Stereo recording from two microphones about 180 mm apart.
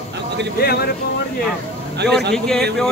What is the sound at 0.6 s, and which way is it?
Speech, 60° left (ahead or behind).